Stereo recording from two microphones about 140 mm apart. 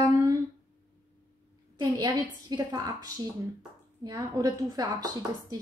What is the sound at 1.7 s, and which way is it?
A woman's voice, 30° right (ahead or behind).